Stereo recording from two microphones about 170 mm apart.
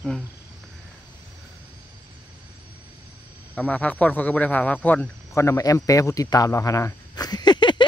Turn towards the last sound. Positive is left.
turn(degrees=25)  # may be behind; listen again after turning